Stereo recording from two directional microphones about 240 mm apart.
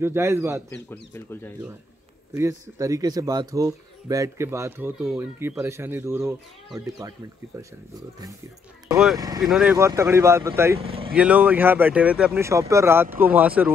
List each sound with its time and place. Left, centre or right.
0.0 s speech: centre
0.8 s speech: centre
2.3 s speech: centre
8.9 s speech: centre
10.8 s speech: right
11.1 s speech: centre